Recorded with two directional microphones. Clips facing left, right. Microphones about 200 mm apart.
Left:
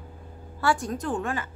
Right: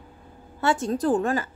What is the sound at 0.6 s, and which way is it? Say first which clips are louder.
Speech: right 2 dB; 25° right (ahead or behind).